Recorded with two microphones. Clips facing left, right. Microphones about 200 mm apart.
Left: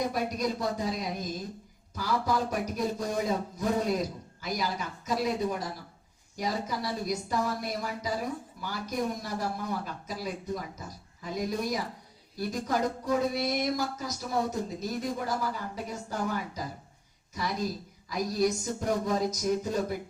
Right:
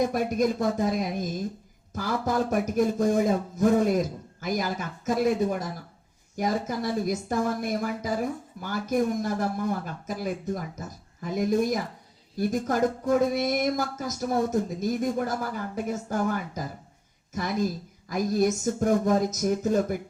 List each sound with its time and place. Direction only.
0.1 s speech: 50° right (ahead or behind)